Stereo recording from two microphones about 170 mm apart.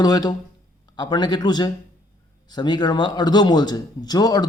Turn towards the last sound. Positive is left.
turn(degrees=25)  # may be behind; listen again after turning